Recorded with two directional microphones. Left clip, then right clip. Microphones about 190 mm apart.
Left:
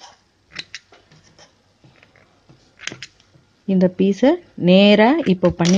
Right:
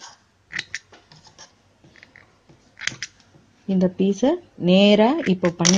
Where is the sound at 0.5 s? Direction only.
Centre (ahead or behind).